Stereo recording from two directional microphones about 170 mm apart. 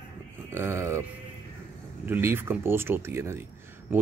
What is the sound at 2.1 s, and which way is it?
Speech, 15° right (ahead or behind).